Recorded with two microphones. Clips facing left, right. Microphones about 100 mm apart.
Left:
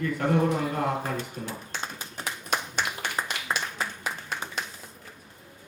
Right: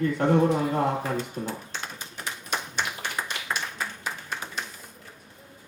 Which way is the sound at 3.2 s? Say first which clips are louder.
Left 2 dB; 25° left (ahead or behind).